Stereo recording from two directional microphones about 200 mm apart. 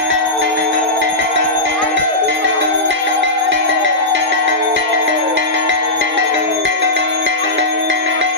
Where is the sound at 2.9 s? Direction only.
70° right (ahead or behind).